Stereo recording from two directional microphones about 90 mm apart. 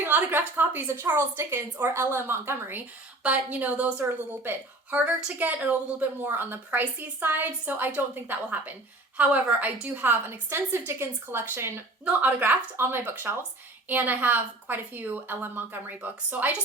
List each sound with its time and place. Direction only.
0.0 s a woman's voice: 20° right (ahead or behind)